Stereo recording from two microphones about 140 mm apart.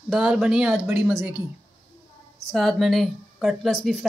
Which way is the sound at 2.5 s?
Centre (ahead or behind).